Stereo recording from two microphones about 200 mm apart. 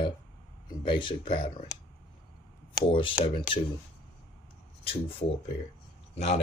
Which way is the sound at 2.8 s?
25° left (ahead or behind).